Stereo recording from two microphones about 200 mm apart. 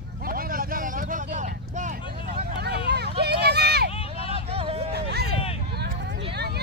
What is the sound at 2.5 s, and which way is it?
Vehicle, 55° right (ahead or behind).